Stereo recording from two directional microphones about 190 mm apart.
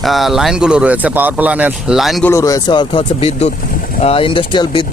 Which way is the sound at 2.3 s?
15° left (ahead or behind).